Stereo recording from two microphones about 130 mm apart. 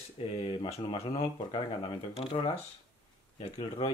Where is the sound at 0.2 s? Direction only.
45° left (ahead or behind).